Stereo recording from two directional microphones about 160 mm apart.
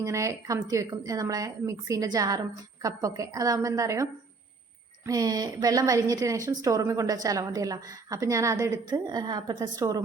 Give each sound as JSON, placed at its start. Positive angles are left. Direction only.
{"t": 0.0, "sound": "a woman's voice", "side_deg": -20}